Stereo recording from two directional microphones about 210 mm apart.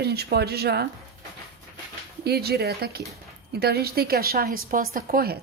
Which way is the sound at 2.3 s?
50° right (ahead or behind).